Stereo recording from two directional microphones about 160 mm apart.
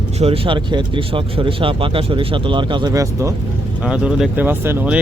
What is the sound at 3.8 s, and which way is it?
Speech, 5° right (ahead or behind).